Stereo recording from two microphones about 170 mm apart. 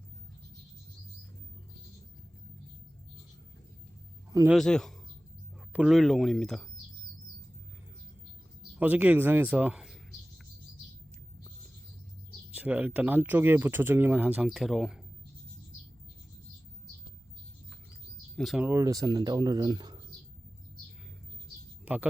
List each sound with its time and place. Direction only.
4.4 s speech: centre (ahead or behind)
8.8 s a sound: 10° right (ahead or behind)
12.5 s speech: 10° right (ahead or behind)
18.3 s speech: centre (ahead or behind)
18.6 s speech: 20° right (ahead or behind)